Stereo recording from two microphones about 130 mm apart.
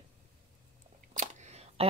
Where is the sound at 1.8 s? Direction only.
50° right (ahead or behind).